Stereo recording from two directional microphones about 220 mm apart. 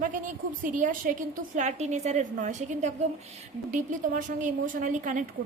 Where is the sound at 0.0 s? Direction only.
35° right (ahead or behind).